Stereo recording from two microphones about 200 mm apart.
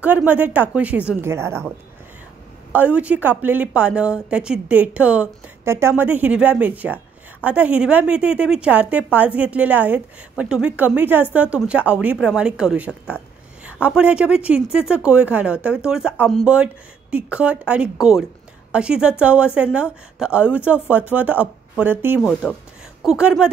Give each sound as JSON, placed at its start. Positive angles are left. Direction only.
{"t": 0.0, "sound": "a woman's voice", "side_deg": -10}
{"t": 2.7, "sound": "a woman's voice", "side_deg": -5}
{"t": 22.2, "sound": "speech", "side_deg": 5}